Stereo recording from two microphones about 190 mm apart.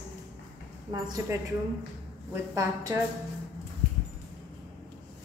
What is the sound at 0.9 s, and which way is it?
A woman's voice, 20° right (ahead or behind).